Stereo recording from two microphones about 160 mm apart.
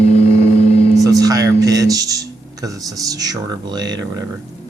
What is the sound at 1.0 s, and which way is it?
Speech, 20° right (ahead or behind).